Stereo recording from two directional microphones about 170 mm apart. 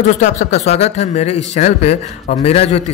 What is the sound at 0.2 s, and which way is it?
Speech, 45° left (ahead or behind).